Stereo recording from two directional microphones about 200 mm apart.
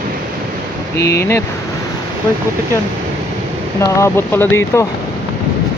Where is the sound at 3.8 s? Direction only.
15° left (ahead or behind).